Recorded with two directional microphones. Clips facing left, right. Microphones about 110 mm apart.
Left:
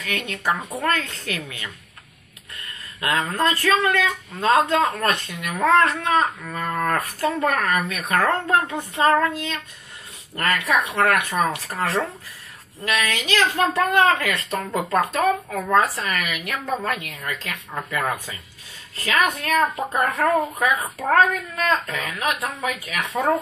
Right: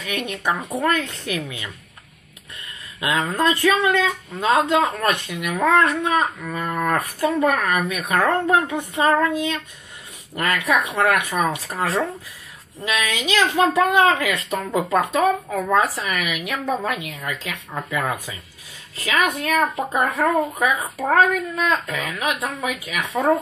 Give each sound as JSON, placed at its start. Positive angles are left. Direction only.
{"t": 0.0, "sound": "speech", "side_deg": -15}
{"t": 3.0, "sound": "speech", "side_deg": -15}
{"t": 9.0, "sound": "speech", "side_deg": -10}
{"t": 18.9, "sound": "a child's voice", "side_deg": -10}